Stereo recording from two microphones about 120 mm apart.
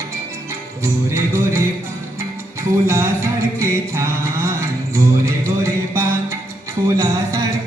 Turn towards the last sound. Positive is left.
turn(degrees=-30)  # may be behind; listen again after turning